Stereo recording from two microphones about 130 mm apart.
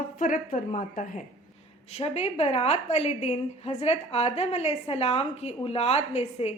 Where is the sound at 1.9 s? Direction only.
55° left (ahead or behind).